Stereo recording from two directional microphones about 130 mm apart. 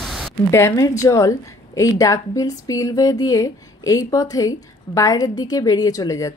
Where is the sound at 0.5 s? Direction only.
20° left (ahead or behind).